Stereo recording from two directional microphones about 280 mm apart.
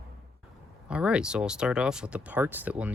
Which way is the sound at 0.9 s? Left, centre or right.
Centre.